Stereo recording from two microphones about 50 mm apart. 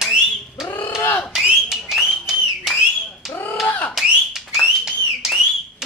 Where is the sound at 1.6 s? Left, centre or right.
Centre.